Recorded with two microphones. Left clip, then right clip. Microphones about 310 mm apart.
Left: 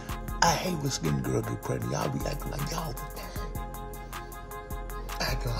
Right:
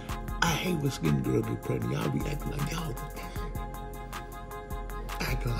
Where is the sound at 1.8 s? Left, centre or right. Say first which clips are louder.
Left 1 dB; centre.